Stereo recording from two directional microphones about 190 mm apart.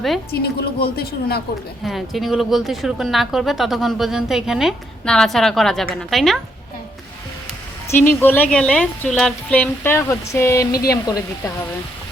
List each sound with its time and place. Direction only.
0.6 s a man's voice: 55° left (ahead or behind)
1.8 s speech: centre (ahead or behind)
7.9 s a woman's voice: 10° left (ahead or behind)